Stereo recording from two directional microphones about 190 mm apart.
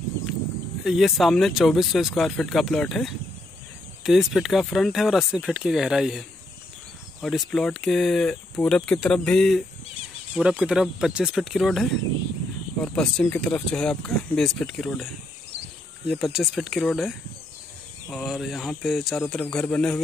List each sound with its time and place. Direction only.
0.8 s speech: centre (ahead or behind)
16.1 s speech: centre (ahead or behind)
18.1 s speech: centre (ahead or behind)